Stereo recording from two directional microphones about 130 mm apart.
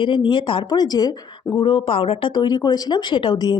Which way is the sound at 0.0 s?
40° left (ahead or behind).